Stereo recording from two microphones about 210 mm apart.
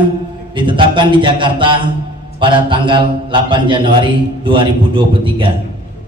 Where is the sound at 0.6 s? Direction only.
25° right (ahead or behind).